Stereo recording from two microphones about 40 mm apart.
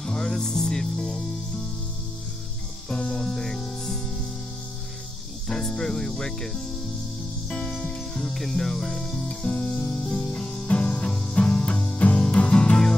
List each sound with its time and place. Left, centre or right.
0.0 s music: centre
2.9 s music: left
5.5 s speech: centre
7.4 s music: left
8.2 s speech: centre
9.5 s music: left
10.3 s music: left